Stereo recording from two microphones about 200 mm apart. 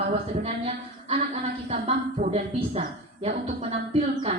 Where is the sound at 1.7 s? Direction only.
30° right (ahead or behind).